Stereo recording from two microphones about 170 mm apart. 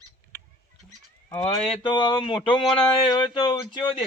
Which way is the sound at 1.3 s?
25° left (ahead or behind).